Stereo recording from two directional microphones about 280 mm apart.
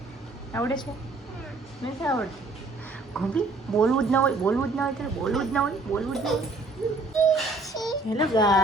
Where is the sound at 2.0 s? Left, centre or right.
Centre.